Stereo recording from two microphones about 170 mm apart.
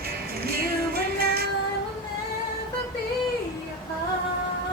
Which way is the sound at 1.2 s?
65° right (ahead or behind).